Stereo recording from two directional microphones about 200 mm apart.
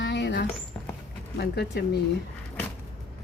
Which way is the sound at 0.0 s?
60° left (ahead or behind).